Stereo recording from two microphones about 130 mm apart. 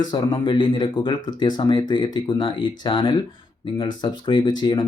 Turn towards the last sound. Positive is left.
turn(degrees=35)  # may be behind; listen again after turning